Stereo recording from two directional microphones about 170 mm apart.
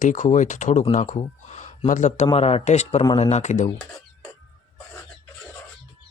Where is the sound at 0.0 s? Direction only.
45° left (ahead or behind).